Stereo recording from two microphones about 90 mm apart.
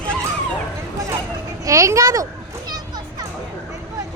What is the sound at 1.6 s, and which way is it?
Speech, 35° right (ahead or behind).